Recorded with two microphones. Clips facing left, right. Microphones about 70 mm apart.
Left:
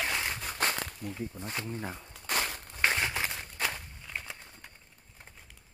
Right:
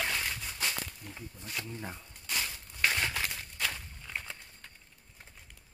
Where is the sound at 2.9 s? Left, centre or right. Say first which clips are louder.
Left 2 dB; left.